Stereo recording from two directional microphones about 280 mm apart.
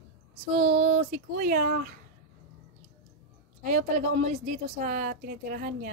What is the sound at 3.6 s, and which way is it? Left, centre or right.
A woman's voice, right.